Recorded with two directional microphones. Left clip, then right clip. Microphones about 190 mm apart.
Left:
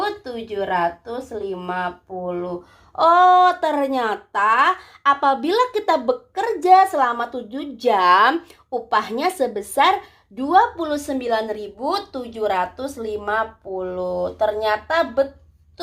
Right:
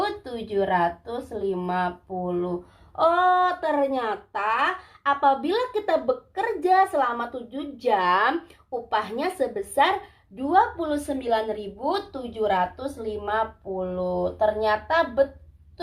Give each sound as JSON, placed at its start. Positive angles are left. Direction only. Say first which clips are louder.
{"t": 0.0, "sound": "speech", "louder": "left 3 dB", "side_deg": 20}
{"t": 2.9, "sound": "speech", "louder": "left 7 dB", "side_deg": 40}
{"t": 12.4, "sound": "speech", "louder": "left 2 dB", "side_deg": 45}